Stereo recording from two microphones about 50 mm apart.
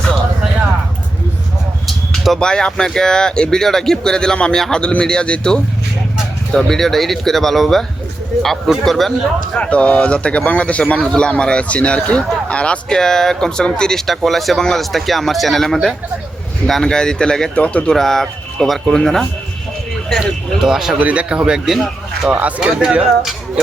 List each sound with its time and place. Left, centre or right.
1.9 s a sound: centre
2.4 s speech: centre
4.8 s speech: left; by 9.1 s centre
9.6 s speech: left
11.0 s speech: centre
12.9 s speech: centre
14.3 s speech: centre
17.5 s speech: left
17.9 s speech: centre
20.6 s speech: centre
21.0 s a man's voice: right
21.7 s speech: centre
22.3 s speech: right
22.6 s a man's voice: centre